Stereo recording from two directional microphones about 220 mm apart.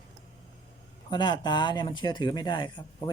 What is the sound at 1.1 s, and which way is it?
Speech, 20° left (ahead or behind).